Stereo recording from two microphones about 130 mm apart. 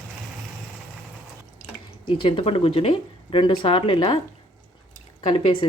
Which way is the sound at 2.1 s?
45° left (ahead or behind).